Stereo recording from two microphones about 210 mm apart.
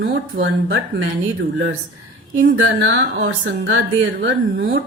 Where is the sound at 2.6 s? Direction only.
65° right (ahead or behind).